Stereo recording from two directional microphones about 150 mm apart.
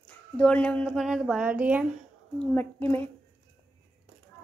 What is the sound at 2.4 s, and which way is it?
Speech, 10° left (ahead or behind).